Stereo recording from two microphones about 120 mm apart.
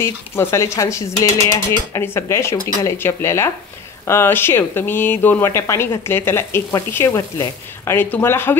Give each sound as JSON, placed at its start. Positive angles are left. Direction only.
{"t": 0.0, "sound": "speech", "side_deg": 20}